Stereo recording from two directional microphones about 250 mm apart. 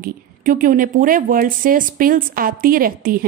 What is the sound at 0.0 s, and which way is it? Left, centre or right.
Speech, right.